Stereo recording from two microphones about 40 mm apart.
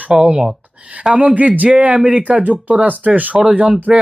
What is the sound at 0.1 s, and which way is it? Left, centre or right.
Speech, right.